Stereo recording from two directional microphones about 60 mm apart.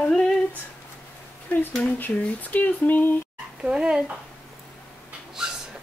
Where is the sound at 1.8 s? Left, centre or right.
Left.